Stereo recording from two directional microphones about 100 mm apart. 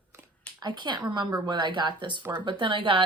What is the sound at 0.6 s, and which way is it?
A woman's voice, 45° right (ahead or behind).